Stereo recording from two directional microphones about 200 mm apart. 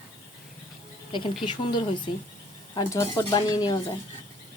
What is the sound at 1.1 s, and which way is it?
Speech, 25° left (ahead or behind).